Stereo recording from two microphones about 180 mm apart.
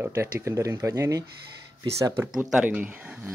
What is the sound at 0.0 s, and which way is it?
Speech, 15° right (ahead or behind).